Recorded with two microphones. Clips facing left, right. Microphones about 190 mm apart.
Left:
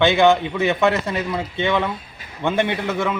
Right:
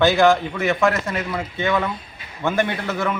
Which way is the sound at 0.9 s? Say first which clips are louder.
Left 2 dB; 20° left (ahead or behind).